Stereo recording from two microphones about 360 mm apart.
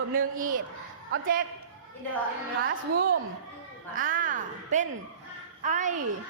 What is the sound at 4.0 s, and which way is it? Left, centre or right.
A woman's voice, right.